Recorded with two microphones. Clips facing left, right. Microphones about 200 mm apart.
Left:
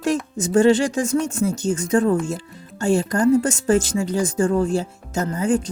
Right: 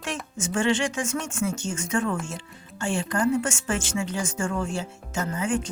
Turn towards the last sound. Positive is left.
turn(degrees=35)  # may be behind; listen again after turning